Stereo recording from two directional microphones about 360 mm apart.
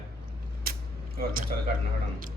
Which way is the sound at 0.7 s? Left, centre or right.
Right.